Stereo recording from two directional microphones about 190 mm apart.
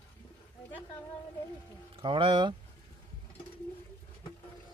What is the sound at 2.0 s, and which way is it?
Speech, 25° right (ahead or behind).